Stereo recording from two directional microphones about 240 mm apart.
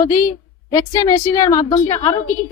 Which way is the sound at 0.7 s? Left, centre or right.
Centre.